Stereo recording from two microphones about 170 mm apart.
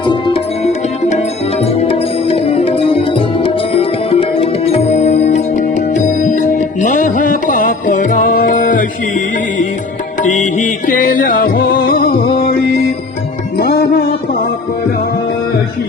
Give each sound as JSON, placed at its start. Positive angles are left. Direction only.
{"t": 0.0, "sound": "music", "side_deg": 30}